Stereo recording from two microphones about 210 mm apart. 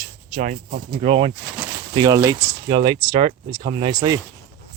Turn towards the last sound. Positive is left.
turn(degrees=-20)  # may be behind; listen again after turning